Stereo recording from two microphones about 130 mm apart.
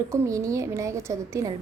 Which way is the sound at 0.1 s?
25° right (ahead or behind).